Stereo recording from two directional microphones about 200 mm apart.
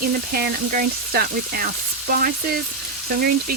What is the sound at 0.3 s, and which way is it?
Speech, 45° right (ahead or behind).